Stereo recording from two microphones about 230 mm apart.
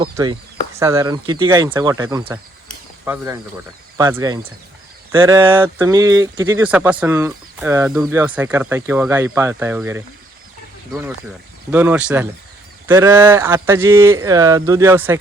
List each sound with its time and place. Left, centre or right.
0.0 s speech: centre
11.7 s speech: centre